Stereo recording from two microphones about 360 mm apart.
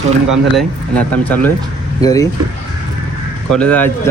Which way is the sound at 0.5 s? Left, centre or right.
Centre.